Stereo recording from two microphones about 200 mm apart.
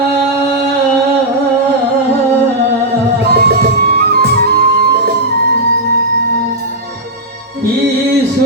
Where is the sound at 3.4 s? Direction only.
50° right (ahead or behind).